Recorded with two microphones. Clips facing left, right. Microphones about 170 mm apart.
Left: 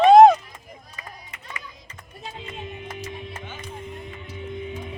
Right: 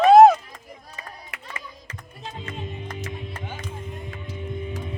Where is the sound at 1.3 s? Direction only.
75° right (ahead or behind).